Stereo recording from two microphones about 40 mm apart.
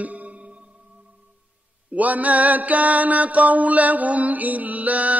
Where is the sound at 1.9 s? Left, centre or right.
Right.